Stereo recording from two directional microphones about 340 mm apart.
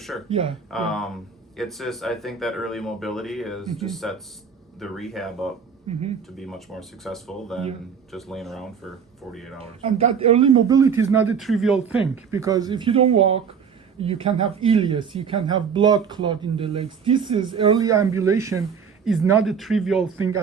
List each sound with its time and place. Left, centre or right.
0.1 s speech: centre
5.9 s speech: centre
6.3 s speech: centre
9.6 s speech: centre